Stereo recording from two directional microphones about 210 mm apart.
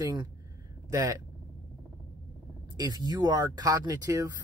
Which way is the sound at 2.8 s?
20° right (ahead or behind).